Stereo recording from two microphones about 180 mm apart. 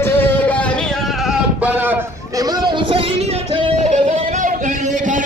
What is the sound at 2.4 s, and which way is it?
Music, 25° right (ahead or behind).